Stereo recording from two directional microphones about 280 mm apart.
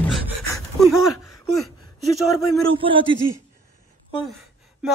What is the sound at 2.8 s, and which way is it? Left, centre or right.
Speech, centre.